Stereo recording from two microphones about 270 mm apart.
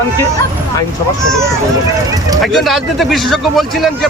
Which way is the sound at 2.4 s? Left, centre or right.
Centre.